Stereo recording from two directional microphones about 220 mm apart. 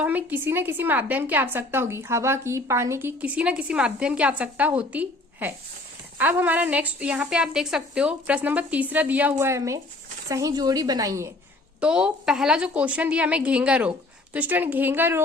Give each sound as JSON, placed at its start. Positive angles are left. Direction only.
{"t": 0.0, "sound": "a woman's voice", "side_deg": -5}